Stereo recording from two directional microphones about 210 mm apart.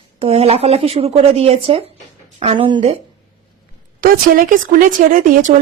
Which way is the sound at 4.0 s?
40° right (ahead or behind).